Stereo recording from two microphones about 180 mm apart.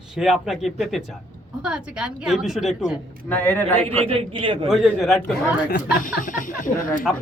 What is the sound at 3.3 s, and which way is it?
Speech, 10° left (ahead or behind).